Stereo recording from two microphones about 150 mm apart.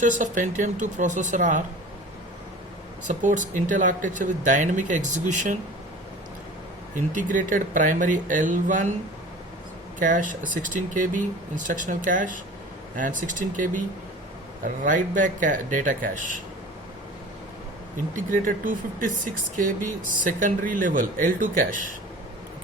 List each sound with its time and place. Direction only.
0.0 s speech: 55° right (ahead or behind)
3.1 s speech: 60° right (ahead or behind)
6.9 s speech: 60° right (ahead or behind)
10.0 s speech: 60° right (ahead or behind)
18.2 s speech: 65° right (ahead or behind)